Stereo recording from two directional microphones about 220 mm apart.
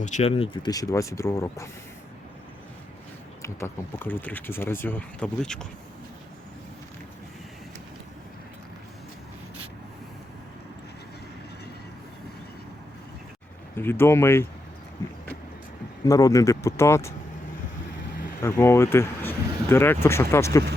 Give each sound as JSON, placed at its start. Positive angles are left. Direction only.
{"t": 0.0, "sound": "speech", "side_deg": 30}
{"t": 3.4, "sound": "speech", "side_deg": 10}
{"t": 13.7, "sound": "speech", "side_deg": 10}
{"t": 16.0, "sound": "speech", "side_deg": 15}
{"t": 18.4, "sound": "speech", "side_deg": 15}